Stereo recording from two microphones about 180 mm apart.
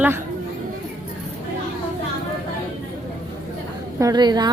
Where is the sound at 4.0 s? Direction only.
20° right (ahead or behind).